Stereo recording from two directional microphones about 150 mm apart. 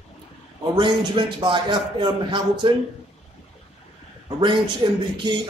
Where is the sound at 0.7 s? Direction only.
30° right (ahead or behind).